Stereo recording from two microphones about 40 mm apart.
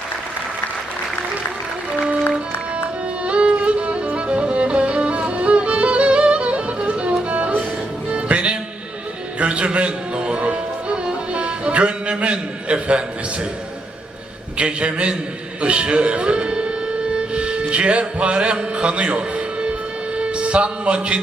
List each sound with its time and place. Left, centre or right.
3.2 s music: right
12.2 s a sound: right
14.6 s a man's voice: right
15.6 s music: right